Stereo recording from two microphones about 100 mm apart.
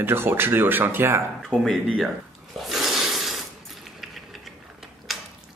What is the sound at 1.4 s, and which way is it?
Speech, centre (ahead or behind).